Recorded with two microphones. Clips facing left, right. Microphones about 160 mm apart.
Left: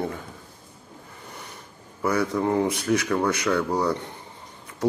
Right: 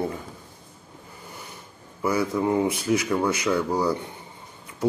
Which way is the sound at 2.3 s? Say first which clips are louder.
Right 1 dB; 10° right (ahead or behind).